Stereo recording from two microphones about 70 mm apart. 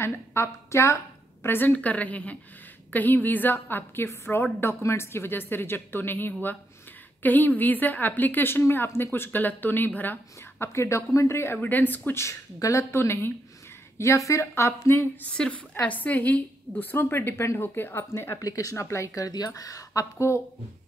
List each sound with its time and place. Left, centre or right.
0.0 s a woman's voice: left
1.4 s a woman's voice: left
10.6 s a woman's voice: left
11.5 s a woman's voice: left
15.3 s a woman's voice: centre; by 18.4 s left
18.4 s speech: left